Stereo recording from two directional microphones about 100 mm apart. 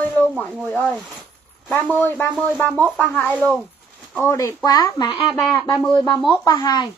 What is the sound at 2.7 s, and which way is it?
Speech, 15° right (ahead or behind).